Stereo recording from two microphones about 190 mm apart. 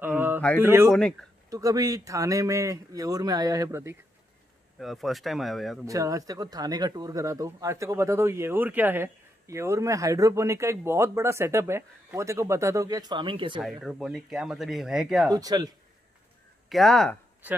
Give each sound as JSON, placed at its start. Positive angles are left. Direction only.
{"t": 0.0, "sound": "mantra", "side_deg": -10}
{"t": 0.6, "sound": "speech", "side_deg": -10}
{"t": 4.7, "sound": "speech", "side_deg": 0}
{"t": 5.9, "sound": "speech", "side_deg": -15}
{"t": 13.6, "sound": "speech", "side_deg": 0}
{"t": 15.2, "sound": "speech", "side_deg": -20}
{"t": 16.6, "sound": "speech", "side_deg": 0}